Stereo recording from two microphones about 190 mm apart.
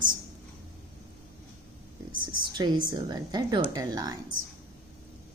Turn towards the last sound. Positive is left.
turn(degrees=-20)  # may be behind; listen again after turning